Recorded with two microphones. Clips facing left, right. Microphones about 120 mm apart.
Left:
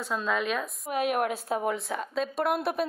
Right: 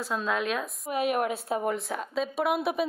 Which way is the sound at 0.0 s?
Centre (ahead or behind).